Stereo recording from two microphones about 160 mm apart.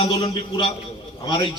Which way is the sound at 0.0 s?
30° left (ahead or behind).